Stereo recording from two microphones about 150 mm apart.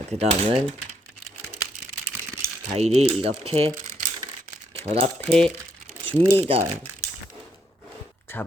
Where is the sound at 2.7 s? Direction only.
45° right (ahead or behind).